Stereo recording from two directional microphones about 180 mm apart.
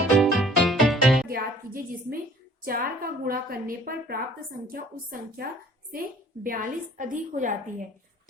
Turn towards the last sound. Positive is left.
turn(degrees=-45)  # may be behind; listen again after turning